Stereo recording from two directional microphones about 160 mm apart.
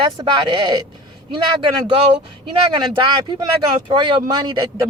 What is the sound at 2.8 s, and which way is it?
Speech, 30° right (ahead or behind).